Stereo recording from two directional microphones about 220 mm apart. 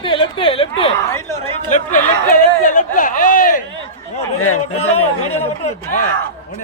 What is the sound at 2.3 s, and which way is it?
Speech, 40° left (ahead or behind).